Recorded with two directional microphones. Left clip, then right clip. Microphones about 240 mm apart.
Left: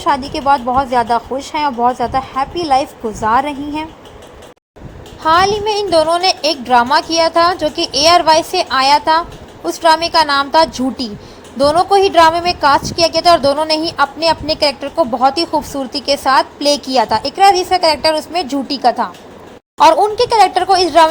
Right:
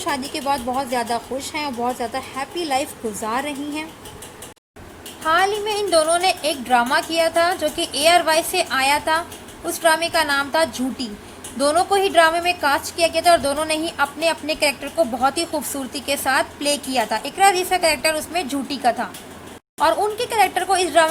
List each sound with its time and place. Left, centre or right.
0.0 s a woman's voice: centre
5.2 s a woman's voice: centre